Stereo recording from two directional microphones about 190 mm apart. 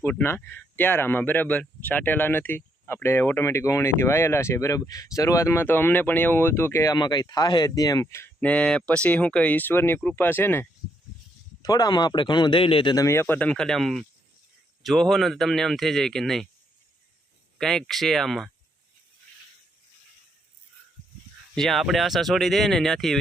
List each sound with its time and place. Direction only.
0.0 s speech: 10° left (ahead or behind)
17.6 s speech: centre (ahead or behind)
21.5 s speech: centre (ahead or behind)